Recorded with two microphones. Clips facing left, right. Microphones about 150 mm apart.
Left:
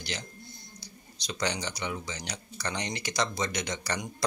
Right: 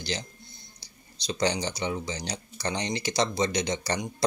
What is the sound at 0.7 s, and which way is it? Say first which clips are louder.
Speech: left 5 dB; 30° right (ahead or behind).